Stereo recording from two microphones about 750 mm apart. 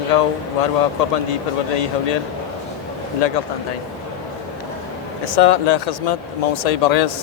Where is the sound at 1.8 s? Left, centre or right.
Left.